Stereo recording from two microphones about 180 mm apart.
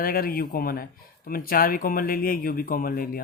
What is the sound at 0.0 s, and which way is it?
Speech, 55° left (ahead or behind).